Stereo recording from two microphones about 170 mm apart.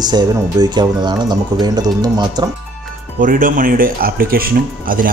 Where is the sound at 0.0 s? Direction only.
25° right (ahead or behind).